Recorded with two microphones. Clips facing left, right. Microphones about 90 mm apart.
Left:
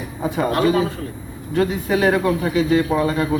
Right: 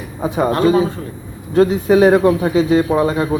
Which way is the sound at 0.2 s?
25° right (ahead or behind).